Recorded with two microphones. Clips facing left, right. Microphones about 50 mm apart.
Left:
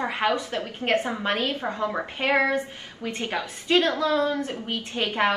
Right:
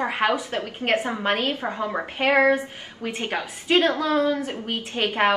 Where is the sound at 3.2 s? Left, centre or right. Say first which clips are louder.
Right 1 dB; right.